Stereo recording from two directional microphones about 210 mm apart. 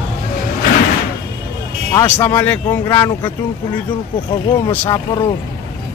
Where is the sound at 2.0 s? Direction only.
15° left (ahead or behind).